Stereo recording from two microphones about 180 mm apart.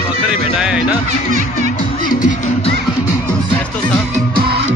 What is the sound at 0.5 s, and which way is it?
Music, 5° right (ahead or behind).